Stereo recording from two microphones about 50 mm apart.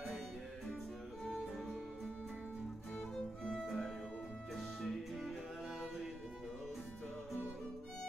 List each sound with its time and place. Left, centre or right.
1.2 s music: centre
3.4 s music: centre